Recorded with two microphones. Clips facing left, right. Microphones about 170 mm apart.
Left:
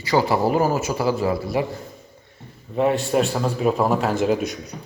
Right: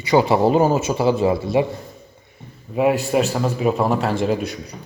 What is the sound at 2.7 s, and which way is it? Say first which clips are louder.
A man's voice: right 2 dB; 5° right (ahead or behind).